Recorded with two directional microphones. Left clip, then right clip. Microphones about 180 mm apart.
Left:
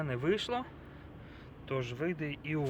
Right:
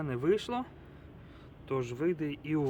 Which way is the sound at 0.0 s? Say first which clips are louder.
Right 2 dB; 30° right (ahead or behind).